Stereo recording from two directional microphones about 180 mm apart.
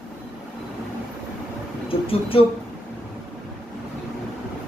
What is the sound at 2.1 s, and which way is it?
Speech, 30° left (ahead or behind).